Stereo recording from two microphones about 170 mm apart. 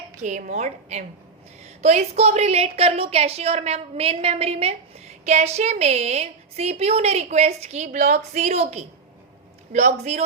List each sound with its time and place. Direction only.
0.2 s a woman's voice: 45° right (ahead or behind)